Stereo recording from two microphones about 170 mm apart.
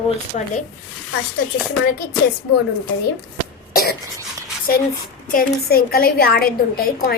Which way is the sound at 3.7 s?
65° left (ahead or behind).